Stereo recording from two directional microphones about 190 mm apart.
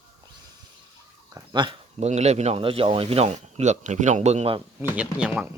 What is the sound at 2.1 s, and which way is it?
Speech, 35° right (ahead or behind).